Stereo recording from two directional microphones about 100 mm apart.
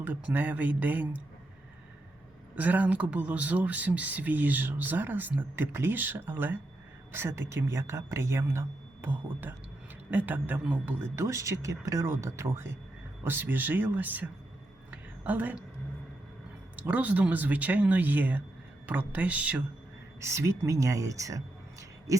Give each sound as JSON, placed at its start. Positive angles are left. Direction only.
{"t": 0.0, "sound": "speech", "side_deg": -15}
{"t": 2.6, "sound": "speech", "side_deg": -15}
{"t": 11.1, "sound": "speech", "side_deg": -30}
{"t": 14.8, "sound": "a sound", "side_deg": -15}
{"t": 16.7, "sound": "speech", "side_deg": -15}
{"t": 20.2, "sound": "speech", "side_deg": -25}